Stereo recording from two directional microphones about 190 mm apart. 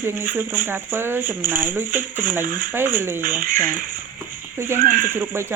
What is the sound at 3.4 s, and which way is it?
Speech, 45° right (ahead or behind).